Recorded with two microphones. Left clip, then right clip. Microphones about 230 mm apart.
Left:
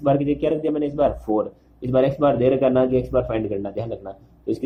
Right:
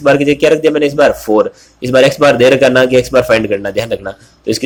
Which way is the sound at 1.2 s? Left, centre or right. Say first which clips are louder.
Right 12 dB; right.